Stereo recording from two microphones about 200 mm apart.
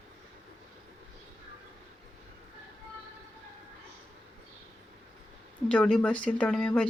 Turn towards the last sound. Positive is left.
turn(degrees=5)  # may be behind; listen again after turning